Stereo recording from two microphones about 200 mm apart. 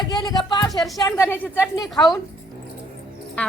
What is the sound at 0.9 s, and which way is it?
Speech, 15° left (ahead or behind).